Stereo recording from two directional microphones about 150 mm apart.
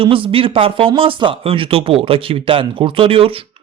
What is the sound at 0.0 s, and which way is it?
Speech, 35° right (ahead or behind).